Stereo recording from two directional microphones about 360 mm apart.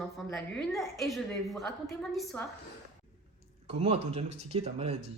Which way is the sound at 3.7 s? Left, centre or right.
Centre.